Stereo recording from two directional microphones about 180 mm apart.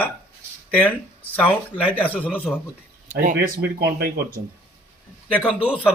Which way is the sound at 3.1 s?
45° right (ahead or behind).